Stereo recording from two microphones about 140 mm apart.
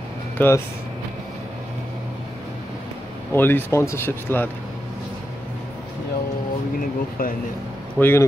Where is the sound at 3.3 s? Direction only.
15° left (ahead or behind).